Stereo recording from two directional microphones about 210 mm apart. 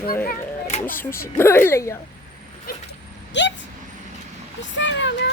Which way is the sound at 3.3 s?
55° left (ahead or behind).